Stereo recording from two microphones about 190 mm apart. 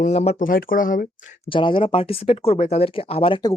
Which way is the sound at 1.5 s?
25° left (ahead or behind).